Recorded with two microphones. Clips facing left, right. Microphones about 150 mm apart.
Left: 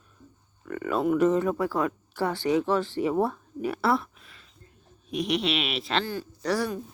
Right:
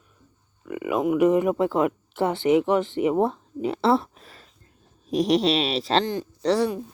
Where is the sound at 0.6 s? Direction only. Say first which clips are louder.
Right 2 dB; 10° right (ahead or behind); by 6.1 s 35° right (ahead or behind).